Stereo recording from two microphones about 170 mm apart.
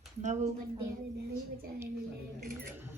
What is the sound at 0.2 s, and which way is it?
Speech, 45° right (ahead or behind).